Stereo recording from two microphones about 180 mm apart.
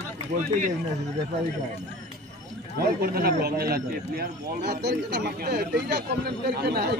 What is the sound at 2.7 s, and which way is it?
A man's voice, 60° right (ahead or behind).